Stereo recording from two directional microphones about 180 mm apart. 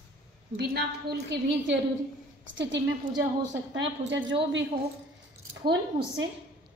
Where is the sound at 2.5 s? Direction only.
80° right.